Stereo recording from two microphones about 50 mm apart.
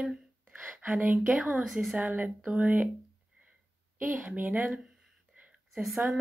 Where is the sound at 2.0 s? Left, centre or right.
Right.